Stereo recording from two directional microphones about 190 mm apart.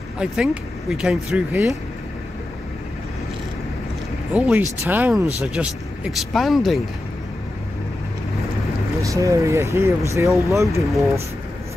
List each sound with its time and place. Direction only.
0.2 s speech: 5° right (ahead or behind)
4.3 s speech: 5° right (ahead or behind)
8.9 s speech: 15° right (ahead or behind)